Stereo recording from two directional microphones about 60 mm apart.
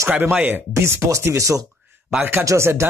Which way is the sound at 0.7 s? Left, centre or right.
Right.